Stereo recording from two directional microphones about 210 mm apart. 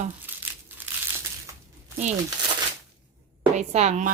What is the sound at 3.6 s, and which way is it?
Speech, 30° right (ahead or behind).